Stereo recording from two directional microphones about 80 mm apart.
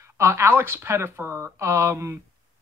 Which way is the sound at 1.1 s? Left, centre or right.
Centre.